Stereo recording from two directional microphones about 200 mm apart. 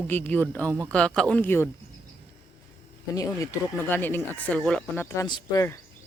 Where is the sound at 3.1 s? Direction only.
15° left (ahead or behind).